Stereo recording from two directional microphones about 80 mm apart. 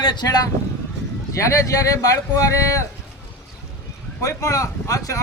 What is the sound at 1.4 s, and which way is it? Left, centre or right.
Speech, left.